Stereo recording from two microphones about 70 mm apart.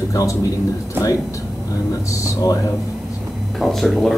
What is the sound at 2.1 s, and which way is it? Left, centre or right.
Speech, left.